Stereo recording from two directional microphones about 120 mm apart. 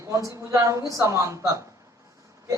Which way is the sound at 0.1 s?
25° right (ahead or behind).